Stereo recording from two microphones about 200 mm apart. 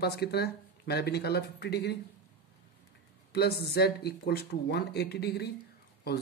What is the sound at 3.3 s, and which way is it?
Speech, 55° left (ahead or behind).